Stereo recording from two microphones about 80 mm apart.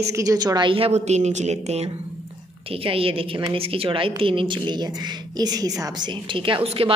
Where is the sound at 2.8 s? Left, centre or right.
Right.